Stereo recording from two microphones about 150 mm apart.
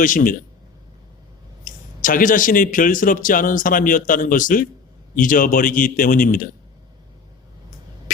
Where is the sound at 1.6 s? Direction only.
65° left (ahead or behind).